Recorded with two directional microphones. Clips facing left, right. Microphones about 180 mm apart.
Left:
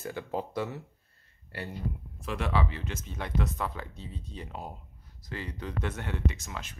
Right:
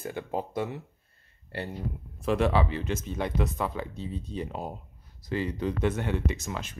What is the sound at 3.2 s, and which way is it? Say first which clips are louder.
Speech: right 2 dB; 10° right (ahead or behind).